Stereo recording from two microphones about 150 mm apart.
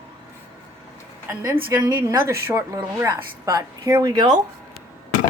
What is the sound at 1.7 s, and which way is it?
A woman's voice, 20° right (ahead or behind).